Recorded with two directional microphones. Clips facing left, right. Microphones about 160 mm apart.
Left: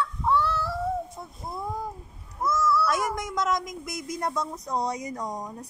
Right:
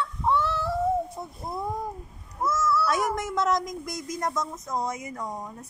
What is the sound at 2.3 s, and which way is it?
Meow, 5° right (ahead or behind).